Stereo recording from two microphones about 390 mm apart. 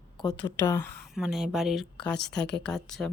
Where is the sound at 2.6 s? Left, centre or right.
Centre.